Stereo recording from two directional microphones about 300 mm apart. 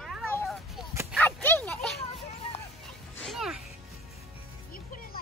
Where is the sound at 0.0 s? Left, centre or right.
Centre.